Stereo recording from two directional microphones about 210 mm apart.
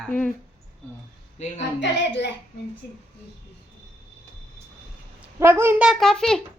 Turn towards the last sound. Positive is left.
turn(degrees=0)  # may be behind; listen again after turning